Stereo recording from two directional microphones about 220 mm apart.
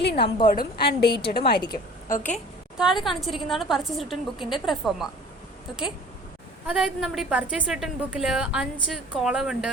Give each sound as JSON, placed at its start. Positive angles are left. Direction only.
{"t": 0.0, "sound": "a sound", "side_deg": 50}
{"t": 0.4, "sound": "a woman's voice", "side_deg": 45}
{"t": 1.5, "sound": "a woman's voice", "side_deg": 20}
{"t": 2.2, "sound": "a woman's voice", "side_deg": 0}
{"t": 6.7, "sound": "a woman's voice", "side_deg": 0}